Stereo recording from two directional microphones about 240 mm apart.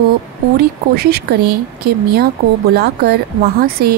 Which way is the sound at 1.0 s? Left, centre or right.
Right.